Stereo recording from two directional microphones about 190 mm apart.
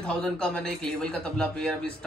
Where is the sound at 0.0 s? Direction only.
5° left (ahead or behind).